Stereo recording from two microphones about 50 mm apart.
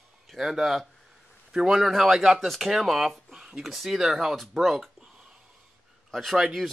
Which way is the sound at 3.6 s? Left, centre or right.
Centre.